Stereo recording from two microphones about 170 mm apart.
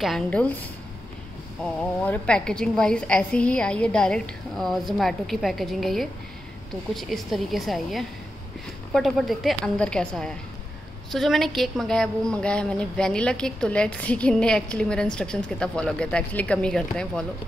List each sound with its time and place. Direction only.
0.0 s a woman's voice: 5° left (ahead or behind)
1.6 s a woman's voice: 5° left (ahead or behind)